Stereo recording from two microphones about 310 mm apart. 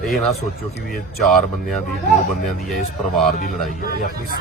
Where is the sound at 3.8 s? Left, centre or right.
Left.